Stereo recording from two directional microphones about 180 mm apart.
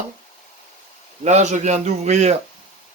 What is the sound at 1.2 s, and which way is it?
Speech, 40° right (ahead or behind).